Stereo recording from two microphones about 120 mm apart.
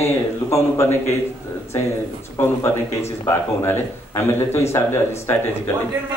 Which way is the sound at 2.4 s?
25° left (ahead or behind).